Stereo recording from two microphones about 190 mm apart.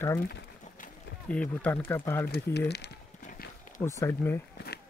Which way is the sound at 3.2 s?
50° left (ahead or behind).